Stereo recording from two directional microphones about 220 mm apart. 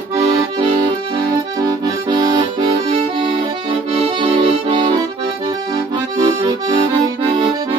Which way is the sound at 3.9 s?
25° right (ahead or behind).